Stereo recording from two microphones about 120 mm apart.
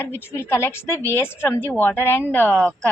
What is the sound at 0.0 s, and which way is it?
A woman's voice, 20° left (ahead or behind).